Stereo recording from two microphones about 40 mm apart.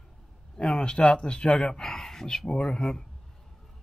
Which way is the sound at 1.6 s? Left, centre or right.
Centre.